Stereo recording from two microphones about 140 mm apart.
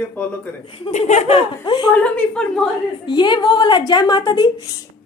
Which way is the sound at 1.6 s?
30° left (ahead or behind).